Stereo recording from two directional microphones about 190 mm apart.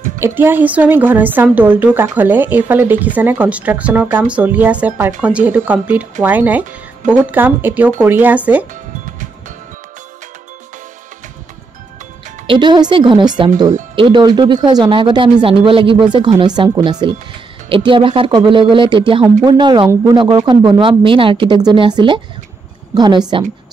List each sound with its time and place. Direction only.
0.2 s a woman's voice: 10° right (ahead or behind)
12.4 s speech: 25° right (ahead or behind)